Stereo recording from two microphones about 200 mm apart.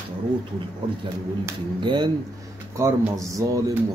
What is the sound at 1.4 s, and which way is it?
Speech, 25° right (ahead or behind).